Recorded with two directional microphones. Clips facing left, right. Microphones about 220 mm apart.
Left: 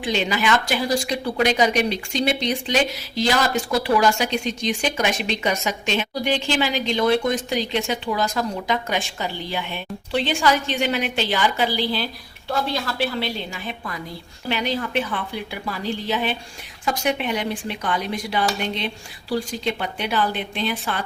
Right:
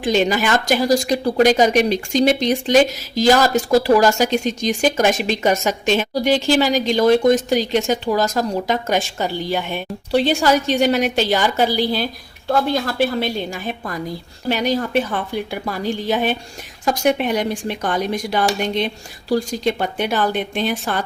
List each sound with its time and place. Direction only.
0.0 s speech: 45° right (ahead or behind)